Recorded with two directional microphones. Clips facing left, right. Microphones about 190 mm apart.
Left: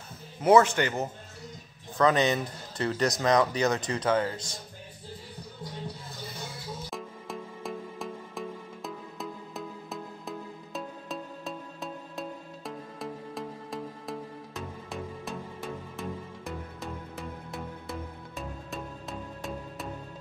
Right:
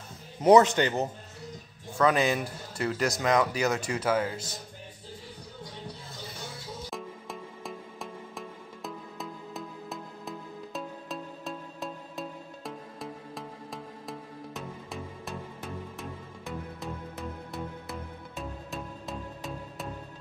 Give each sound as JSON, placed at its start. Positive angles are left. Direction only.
{"t": 0.4, "sound": "speech", "side_deg": -20}
{"t": 2.0, "sound": "speech", "side_deg": -10}
{"t": 6.9, "sound": "music", "side_deg": 0}